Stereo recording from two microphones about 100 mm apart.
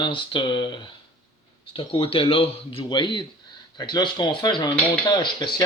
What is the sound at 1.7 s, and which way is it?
Speech, 70° left (ahead or behind).